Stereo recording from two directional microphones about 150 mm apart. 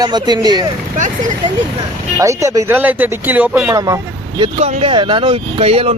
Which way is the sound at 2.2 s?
20° right (ahead or behind).